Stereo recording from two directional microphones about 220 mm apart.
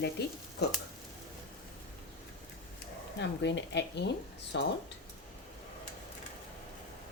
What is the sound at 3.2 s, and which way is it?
Speech, 50° left (ahead or behind).